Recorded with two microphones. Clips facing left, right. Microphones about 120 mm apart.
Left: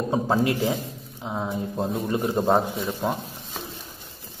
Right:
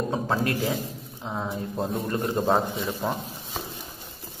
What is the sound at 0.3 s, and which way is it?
Speech, 15° left (ahead or behind).